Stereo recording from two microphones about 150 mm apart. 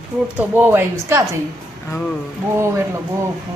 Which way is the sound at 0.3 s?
10° right (ahead or behind).